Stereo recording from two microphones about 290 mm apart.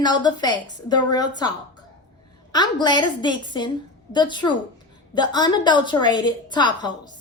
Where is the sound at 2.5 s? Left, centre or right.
Centre.